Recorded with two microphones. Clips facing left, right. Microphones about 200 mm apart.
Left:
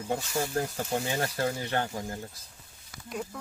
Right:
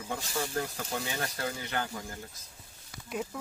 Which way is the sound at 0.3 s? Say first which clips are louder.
Left 3 dB; 35° left (ahead or behind).